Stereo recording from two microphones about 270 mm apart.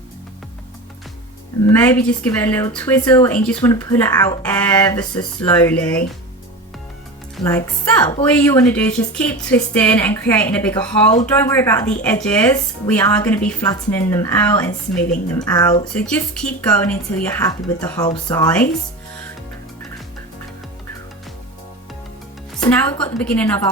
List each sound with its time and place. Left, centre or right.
1.7 s speech: centre
7.3 s a woman's voice: centre
22.6 s a woman's voice: centre